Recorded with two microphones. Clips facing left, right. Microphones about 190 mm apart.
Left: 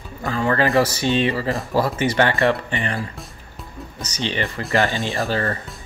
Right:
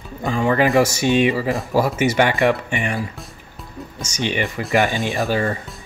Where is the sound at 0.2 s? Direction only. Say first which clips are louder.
Right 2 dB; 15° right (ahead or behind).